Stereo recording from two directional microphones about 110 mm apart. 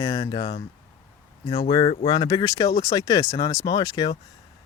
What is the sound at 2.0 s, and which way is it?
Speech, 40° left (ahead or behind).